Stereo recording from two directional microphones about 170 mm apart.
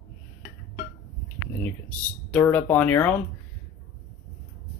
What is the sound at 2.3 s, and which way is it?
Speech, 10° left (ahead or behind).